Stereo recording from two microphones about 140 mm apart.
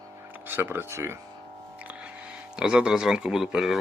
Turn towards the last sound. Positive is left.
turn(degrees=-5)  # may be behind; listen again after turning